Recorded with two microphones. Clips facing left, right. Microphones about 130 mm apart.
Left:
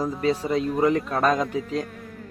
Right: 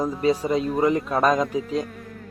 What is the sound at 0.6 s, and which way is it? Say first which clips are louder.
Speech: left 2 dB; centre (ahead or behind).